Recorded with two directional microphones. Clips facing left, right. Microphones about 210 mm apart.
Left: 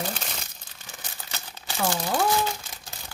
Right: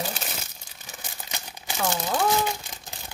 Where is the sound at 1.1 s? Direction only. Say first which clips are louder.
Right 2 dB; 15° right (ahead or behind).